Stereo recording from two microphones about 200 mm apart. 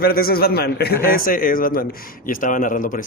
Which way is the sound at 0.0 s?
50° left (ahead or behind).